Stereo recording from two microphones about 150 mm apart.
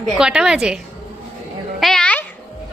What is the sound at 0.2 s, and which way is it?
Speech, 5° right (ahead or behind).